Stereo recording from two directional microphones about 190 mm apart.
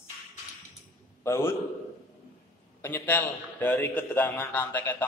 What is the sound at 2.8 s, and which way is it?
A man's voice, 10° left (ahead or behind).